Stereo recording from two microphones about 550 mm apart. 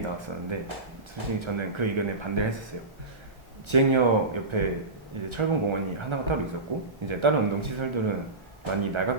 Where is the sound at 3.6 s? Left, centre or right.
Right.